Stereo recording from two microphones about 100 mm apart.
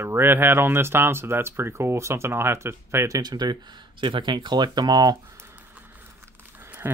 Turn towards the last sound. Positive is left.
turn(degrees=-25)  # may be behind; listen again after turning